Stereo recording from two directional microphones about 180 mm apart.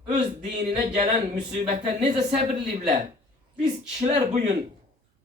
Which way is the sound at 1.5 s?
40° right (ahead or behind).